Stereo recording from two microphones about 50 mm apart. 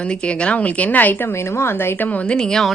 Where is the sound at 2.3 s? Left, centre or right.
Centre.